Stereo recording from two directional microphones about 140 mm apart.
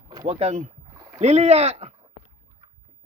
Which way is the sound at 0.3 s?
50° right (ahead or behind).